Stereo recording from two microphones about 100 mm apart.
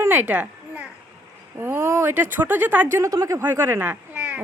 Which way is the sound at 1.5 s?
25° right (ahead or behind).